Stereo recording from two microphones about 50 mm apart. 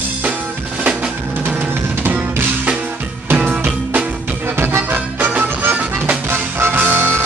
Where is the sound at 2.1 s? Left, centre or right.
Right.